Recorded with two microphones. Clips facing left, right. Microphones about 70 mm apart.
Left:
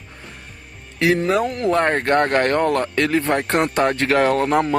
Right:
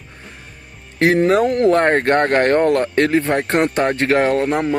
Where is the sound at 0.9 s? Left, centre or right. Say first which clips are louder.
Right 4 dB; right.